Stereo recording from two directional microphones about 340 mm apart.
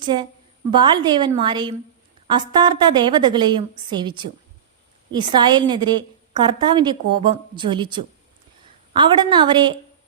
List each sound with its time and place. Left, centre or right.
0.0 s a woman's voice: centre